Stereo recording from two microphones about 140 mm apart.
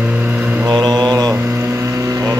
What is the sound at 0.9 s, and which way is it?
Mantra, 30° right (ahead or behind).